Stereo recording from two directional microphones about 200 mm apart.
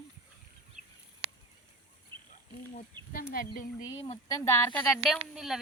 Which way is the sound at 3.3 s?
45° left (ahead or behind).